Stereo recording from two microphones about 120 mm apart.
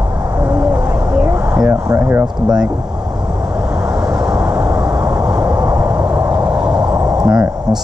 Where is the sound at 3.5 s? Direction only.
10° right (ahead or behind).